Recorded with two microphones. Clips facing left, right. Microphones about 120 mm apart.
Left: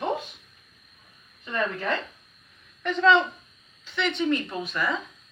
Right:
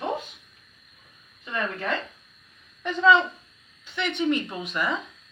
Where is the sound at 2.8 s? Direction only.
10° right (ahead or behind).